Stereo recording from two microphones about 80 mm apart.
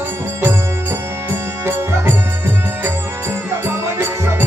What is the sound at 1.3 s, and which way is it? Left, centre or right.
Music, right.